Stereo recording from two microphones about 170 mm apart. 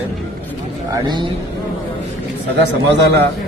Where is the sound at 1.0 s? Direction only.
25° right (ahead or behind).